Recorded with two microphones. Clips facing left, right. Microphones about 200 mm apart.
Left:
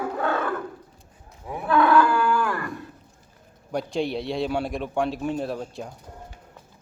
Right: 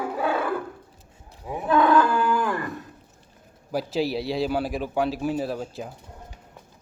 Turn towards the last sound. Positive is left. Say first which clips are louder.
# right 1 dB
turn(degrees=0)  # may be behind; listen again after turning